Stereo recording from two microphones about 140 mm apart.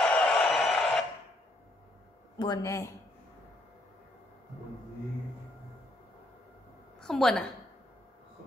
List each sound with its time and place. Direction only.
0.0 s a sound: 5° left (ahead or behind)
2.3 s speech: 30° left (ahead or behind)
7.0 s a woman's voice: 5° left (ahead or behind)